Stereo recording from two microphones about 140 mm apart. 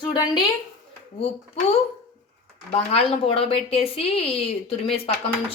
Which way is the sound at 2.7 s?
45° left (ahead or behind).